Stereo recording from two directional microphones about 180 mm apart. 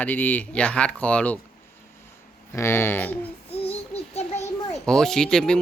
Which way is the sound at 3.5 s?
35° left (ahead or behind).